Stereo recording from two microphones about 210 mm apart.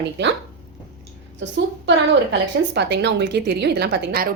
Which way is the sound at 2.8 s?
55° right (ahead or behind).